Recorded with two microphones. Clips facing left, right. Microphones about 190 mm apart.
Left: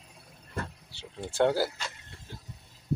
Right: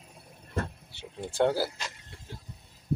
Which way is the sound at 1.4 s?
5° right (ahead or behind).